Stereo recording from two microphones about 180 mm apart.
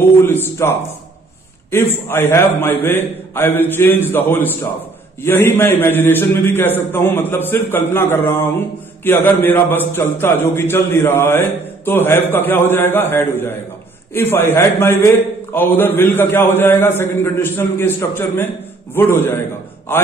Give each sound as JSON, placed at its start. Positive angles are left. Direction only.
{"t": 0.2, "sound": "a man's voice", "side_deg": 10}